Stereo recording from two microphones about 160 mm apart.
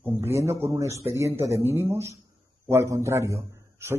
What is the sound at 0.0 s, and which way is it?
A man's voice, 15° right (ahead or behind).